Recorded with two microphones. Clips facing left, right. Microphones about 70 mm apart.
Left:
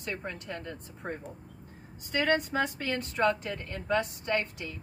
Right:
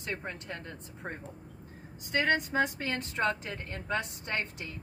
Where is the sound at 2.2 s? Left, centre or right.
Right.